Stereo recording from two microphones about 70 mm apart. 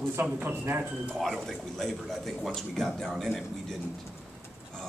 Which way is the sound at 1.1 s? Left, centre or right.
Centre.